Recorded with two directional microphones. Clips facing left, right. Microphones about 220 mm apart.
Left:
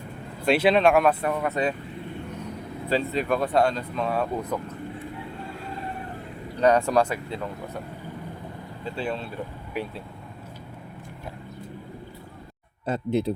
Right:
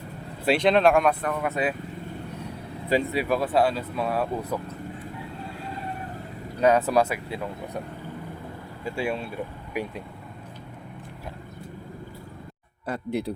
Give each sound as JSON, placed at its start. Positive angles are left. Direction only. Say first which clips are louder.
{"t": 0.4, "sound": "speech", "louder": "even", "side_deg": 5}
{"t": 2.9, "sound": "speech", "louder": "right 1 dB", "side_deg": -10}
{"t": 6.6, "sound": "speech", "louder": "even", "side_deg": -5}
{"t": 8.8, "sound": "speech", "louder": "right 2 dB", "side_deg": -10}
{"t": 12.8, "sound": "speech", "louder": "left 4 dB", "side_deg": 25}